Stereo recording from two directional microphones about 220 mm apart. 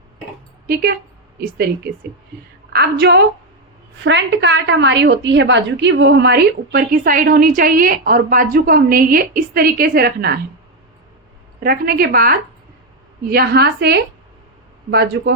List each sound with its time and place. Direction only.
0.7 s a woman's voice: 45° right (ahead or behind)
11.6 s a woman's voice: 45° right (ahead or behind)